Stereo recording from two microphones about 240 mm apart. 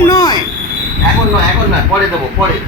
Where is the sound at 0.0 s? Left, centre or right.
Centre.